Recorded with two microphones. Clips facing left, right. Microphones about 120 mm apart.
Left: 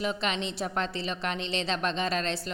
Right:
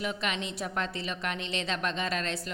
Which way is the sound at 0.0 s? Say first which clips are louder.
Left 3 dB; 30° left (ahead or behind).